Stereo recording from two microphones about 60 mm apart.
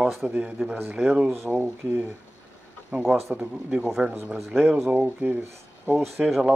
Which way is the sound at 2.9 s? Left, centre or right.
Right.